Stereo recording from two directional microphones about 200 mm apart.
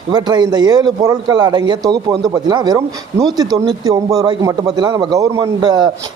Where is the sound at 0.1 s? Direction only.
20° right (ahead or behind).